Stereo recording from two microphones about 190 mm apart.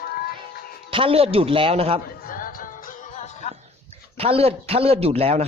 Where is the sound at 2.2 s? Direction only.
50° left (ahead or behind).